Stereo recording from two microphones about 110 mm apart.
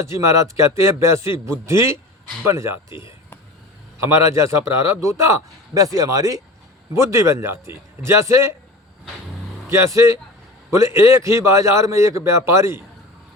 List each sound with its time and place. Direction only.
0.1 s a man's voice: 25° right (ahead or behind)
4.1 s a man's voice: 25° right (ahead or behind)
9.6 s a man's voice: 25° right (ahead or behind)